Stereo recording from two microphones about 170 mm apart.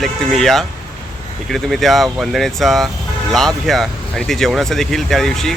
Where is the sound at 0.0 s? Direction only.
Centre (ahead or behind).